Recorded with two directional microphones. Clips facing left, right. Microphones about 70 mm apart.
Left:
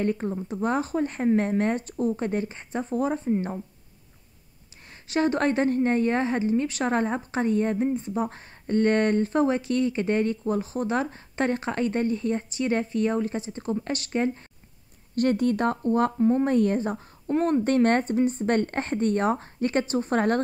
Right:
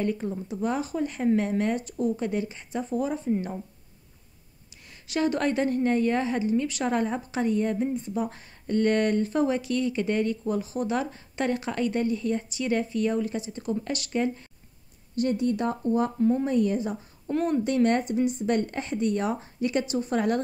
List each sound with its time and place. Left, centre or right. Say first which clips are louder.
0.0 s a woman's voice: left 2 dB; left
5.0 s a woman's voice: left 2 dB; left
15.1 s speech: left 3 dB; left
16.2 s a woman's voice: left 2 dB; left
16.4 s speech: left 2 dB; left